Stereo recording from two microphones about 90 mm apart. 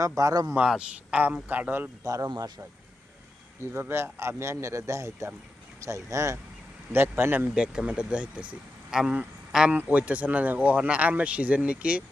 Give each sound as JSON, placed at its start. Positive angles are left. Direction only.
{"t": 0.0, "sound": "a man's voice", "side_deg": -40}
{"t": 0.5, "sound": "speech", "side_deg": -15}
{"t": 2.0, "sound": "a man's voice", "side_deg": -40}
{"t": 3.6, "sound": "a man's voice", "side_deg": -25}
{"t": 7.5, "sound": "speech", "side_deg": -10}